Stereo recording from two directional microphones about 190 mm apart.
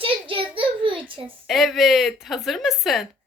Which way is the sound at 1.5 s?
Centre (ahead or behind).